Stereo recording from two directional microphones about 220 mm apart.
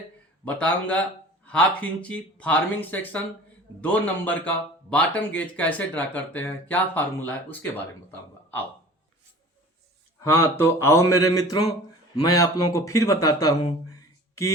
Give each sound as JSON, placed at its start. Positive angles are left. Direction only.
{"t": 0.4, "sound": "speech", "side_deg": 5}
{"t": 10.2, "sound": "speech", "side_deg": 10}